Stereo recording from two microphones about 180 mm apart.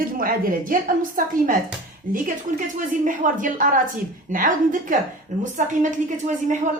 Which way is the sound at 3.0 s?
45° right (ahead or behind).